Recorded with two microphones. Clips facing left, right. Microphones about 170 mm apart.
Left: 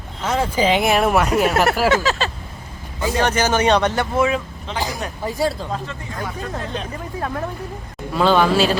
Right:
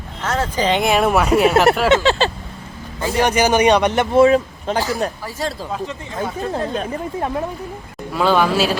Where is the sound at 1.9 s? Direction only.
30° right (ahead or behind).